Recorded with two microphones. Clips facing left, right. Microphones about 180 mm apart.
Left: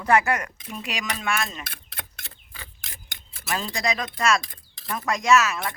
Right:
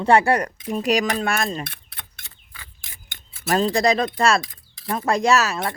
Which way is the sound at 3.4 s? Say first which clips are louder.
Right 9 dB; 35° right (ahead or behind).